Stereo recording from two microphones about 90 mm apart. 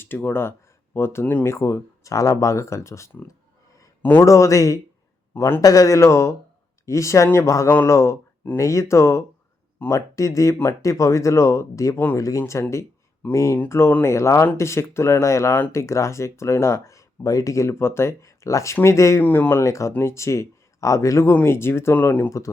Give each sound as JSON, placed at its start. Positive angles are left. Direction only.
{"t": 0.2, "sound": "speech", "side_deg": 25}
{"t": 9.7, "sound": "speech", "side_deg": 20}
{"t": 10.2, "sound": "speech", "side_deg": 35}
{"t": 19.2, "sound": "speech", "side_deg": 20}
{"t": 19.6, "sound": "speech", "side_deg": 35}